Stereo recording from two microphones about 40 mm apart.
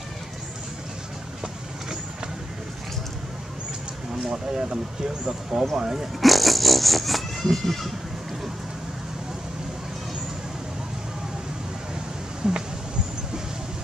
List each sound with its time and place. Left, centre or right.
4.1 s speech: centre
6.2 s a sound: centre
12.4 s speech: centre